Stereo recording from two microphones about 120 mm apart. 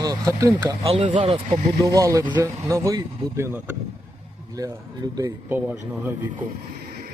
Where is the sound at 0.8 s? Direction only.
50° right (ahead or behind).